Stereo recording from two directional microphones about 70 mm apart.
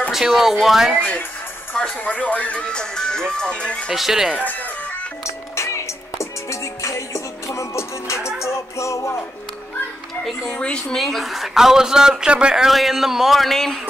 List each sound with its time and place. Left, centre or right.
0.1 s a man's voice: centre
0.9 s speech: left
3.9 s a man's voice: centre
5.2 s music: left
10.2 s speech: centre
11.0 s a man's voice: centre